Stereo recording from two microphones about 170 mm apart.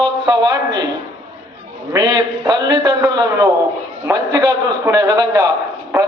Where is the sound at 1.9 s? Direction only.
25° right (ahead or behind).